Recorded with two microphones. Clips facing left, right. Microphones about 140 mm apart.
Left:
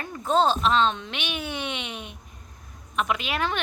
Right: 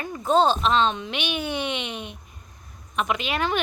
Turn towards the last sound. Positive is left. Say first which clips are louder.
# right 2 dB
turn(degrees=0)  # may be behind; listen again after turning